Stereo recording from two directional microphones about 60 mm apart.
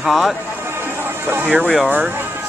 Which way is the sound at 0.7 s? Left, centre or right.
Right.